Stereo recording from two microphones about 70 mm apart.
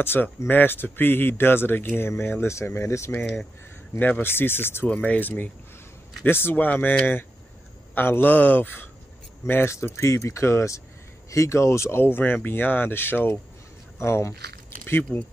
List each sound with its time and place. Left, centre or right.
0.0 s speech: left
4.0 s speech: left
4.8 s speech: left
9.5 s speech: left